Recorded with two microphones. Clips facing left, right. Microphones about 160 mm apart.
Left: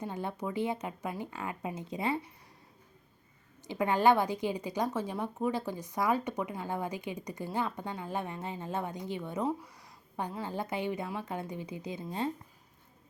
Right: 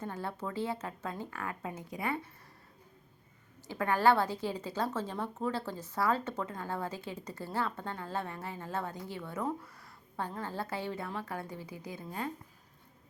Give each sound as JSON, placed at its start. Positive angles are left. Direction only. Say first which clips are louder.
{"t": 0.0, "sound": "a woman's voice", "louder": "left 2 dB", "side_deg": 15}
{"t": 3.7, "sound": "a woman's voice", "louder": "left 2 dB", "side_deg": 20}